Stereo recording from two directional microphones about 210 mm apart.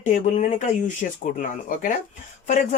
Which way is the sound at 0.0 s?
35° left (ahead or behind).